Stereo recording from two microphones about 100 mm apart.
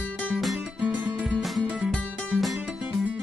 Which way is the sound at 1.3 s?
Centre (ahead or behind).